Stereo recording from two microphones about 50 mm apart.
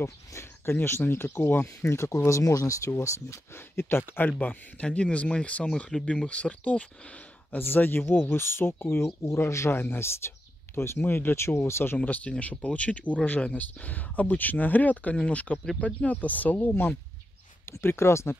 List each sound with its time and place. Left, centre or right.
0.0 s speech: left
1.0 s speech: left
3.5 s speech: left
4.3 s speech: left
7.5 s speech: left
9.8 s speech: left
12.0 s speech: left
17.6 s speech: left